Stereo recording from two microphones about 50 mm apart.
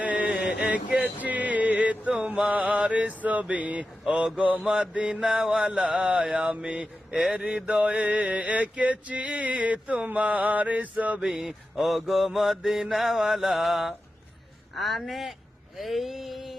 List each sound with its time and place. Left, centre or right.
0.0 s a sound: right
1.2 s music: right
2.2 s mantra: centre
2.5 s mantra: right
4.0 s speech: centre
4.4 s mantra: right
11.3 s mantra: centre
15.8 s a sound: centre